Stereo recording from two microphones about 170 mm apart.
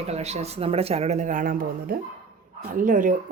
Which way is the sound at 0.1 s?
40° right (ahead or behind).